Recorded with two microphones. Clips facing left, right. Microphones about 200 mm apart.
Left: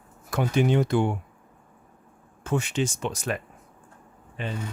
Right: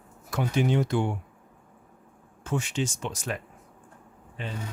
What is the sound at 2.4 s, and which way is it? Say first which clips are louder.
Speech: left 3 dB; 60° left (ahead or behind).